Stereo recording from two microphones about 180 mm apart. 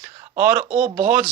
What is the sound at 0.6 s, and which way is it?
Speech, 35° right (ahead or behind).